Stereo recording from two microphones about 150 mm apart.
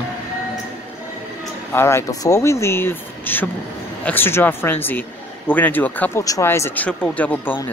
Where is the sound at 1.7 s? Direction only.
15° left (ahead or behind).